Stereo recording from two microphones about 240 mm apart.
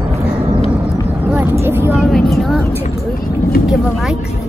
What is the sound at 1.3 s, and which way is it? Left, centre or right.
Vehicle, centre.